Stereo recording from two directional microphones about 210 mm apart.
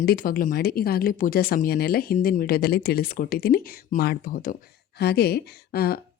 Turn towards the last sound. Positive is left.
turn(degrees=50)  # may be behind; listen again after turning